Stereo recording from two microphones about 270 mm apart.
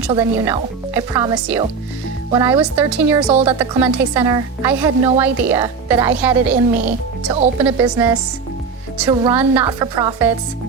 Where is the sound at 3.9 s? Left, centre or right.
Centre.